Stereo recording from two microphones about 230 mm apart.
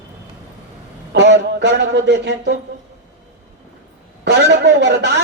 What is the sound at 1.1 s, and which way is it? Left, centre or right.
Speech, right.